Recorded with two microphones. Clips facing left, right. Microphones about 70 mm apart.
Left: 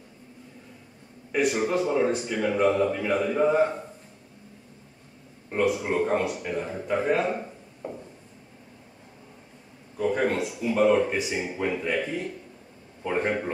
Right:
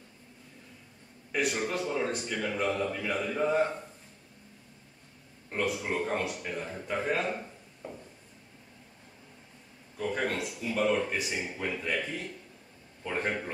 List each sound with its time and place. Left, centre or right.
1.3 s speech: centre
5.5 s speech: centre
9.9 s speech: centre